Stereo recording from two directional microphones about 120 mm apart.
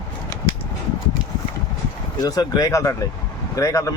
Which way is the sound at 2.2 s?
30° left (ahead or behind).